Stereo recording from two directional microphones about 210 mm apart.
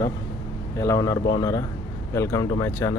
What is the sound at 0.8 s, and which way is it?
Speech, 15° left (ahead or behind).